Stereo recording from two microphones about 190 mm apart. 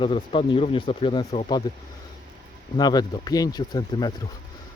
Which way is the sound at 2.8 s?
20° left (ahead or behind).